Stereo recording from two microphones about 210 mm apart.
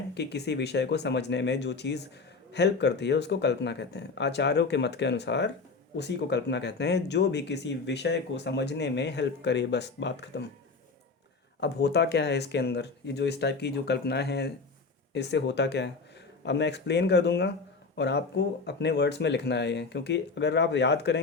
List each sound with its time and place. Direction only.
0.1 s speech: 55° left (ahead or behind)
11.6 s speech: 55° left (ahead or behind)